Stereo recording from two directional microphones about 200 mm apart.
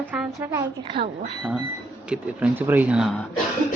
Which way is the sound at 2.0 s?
5° right (ahead or behind).